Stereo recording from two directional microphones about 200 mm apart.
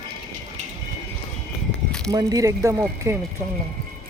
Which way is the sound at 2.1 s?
15° right (ahead or behind).